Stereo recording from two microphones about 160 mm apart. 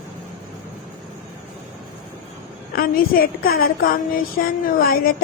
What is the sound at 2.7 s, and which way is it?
A woman's voice, 70° left (ahead or behind).